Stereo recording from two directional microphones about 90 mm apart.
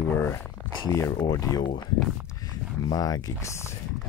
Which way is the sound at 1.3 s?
40° left (ahead or behind).